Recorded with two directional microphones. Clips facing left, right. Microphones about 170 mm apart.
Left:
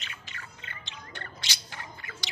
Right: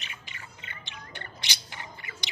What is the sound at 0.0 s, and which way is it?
Bird, 15° right (ahead or behind).